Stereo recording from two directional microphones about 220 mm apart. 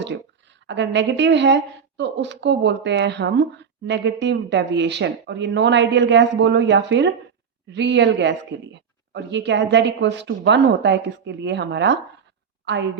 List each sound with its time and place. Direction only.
0.7 s a woman's voice: 55° right (ahead or behind)